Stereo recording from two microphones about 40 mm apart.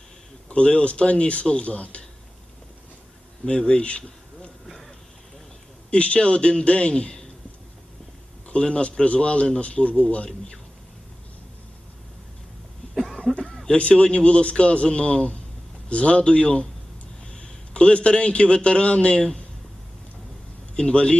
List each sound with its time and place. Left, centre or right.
0.4 s speech: left
3.4 s speech: left
5.9 s speech: left
8.4 s speech: left
12.8 s cough: left
13.3 s a sound: centre
13.7 s a man's voice: left
20.7 s speech: left